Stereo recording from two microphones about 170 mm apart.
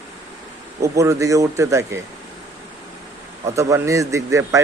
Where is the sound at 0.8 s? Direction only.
15° right (ahead or behind).